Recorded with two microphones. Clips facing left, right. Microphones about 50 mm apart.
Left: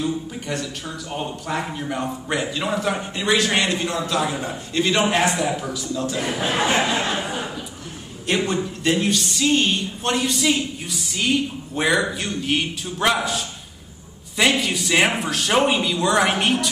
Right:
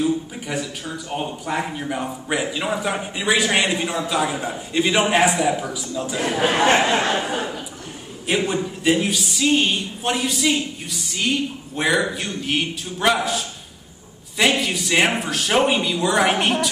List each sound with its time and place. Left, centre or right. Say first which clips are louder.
0.0 s speech: right 3 dB; centre
7.2 s speech: right 3 dB; right
8.3 s speech: even; centre